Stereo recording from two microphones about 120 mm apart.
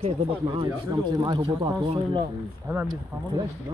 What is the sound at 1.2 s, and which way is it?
Speech, 40° right (ahead or behind).